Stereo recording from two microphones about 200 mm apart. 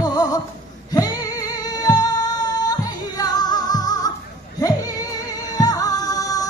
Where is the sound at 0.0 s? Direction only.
20° left (ahead or behind).